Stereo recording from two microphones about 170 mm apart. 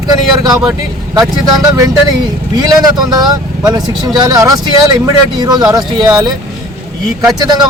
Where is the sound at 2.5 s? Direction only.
25° right (ahead or behind).